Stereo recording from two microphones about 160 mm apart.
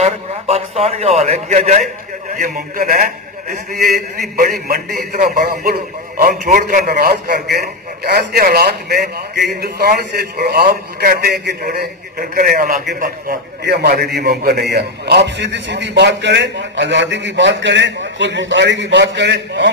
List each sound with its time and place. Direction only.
0.0 s a man's voice: 40° right (ahead or behind)
2.3 s a man's voice: 65° right (ahead or behind); by 11.3 s 85° right
11.4 s a man's voice: 75° right (ahead or behind)
13.7 s a man's voice: 85° right